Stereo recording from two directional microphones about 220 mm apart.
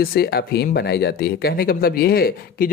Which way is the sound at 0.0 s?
45° left (ahead or behind).